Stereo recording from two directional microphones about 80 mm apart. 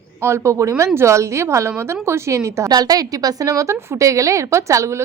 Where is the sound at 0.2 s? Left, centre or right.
Right.